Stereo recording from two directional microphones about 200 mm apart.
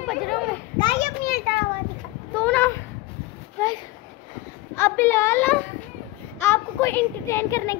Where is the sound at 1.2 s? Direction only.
50° left (ahead or behind).